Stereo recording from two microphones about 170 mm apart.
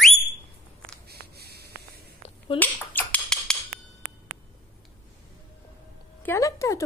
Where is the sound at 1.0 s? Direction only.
70° right (ahead or behind).